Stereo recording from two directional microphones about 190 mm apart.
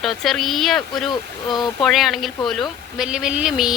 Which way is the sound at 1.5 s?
25° left (ahead or behind).